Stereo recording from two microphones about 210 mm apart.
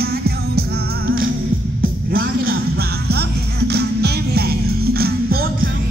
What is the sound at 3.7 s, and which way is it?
Music, 50° right (ahead or behind).